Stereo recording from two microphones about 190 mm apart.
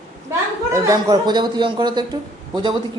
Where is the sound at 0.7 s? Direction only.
15° right (ahead or behind).